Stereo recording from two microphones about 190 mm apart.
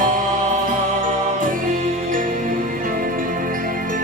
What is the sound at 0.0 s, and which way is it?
Music, 45° right (ahead or behind).